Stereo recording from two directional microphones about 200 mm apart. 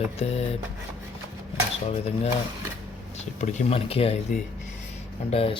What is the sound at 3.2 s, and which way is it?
Speech, 35° left (ahead or behind).